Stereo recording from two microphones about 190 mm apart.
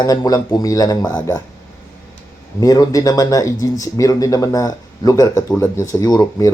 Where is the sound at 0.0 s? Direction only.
20° left (ahead or behind).